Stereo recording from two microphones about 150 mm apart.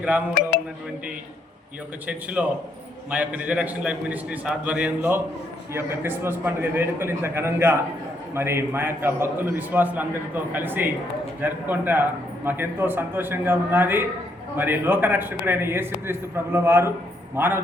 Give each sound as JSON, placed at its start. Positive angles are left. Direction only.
{"t": 2.0, "sound": "a man's voice", "side_deg": -10}